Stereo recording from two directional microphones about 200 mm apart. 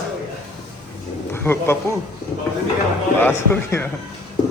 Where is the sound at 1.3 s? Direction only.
10° left (ahead or behind).